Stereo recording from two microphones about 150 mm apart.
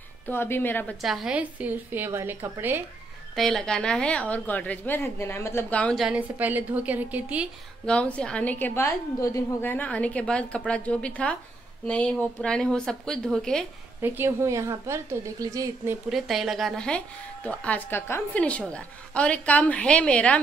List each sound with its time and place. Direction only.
0.3 s a woman's voice: 15° left (ahead or behind)
1.0 s a woman's voice: 5° right (ahead or behind)
3.3 s a woman's voice: centre (ahead or behind)
6.0 s a woman's voice: 10° right (ahead or behind)
7.8 s a woman's voice: 5° left (ahead or behind)
14.0 s a woman's voice: 15° right (ahead or behind)
16.1 s a woman's voice: centre (ahead or behind)